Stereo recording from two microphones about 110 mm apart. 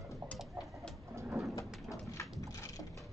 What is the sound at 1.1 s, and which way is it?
Bird, 25° right (ahead or behind).